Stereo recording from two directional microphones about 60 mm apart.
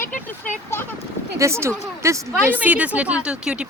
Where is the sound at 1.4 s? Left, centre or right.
Right.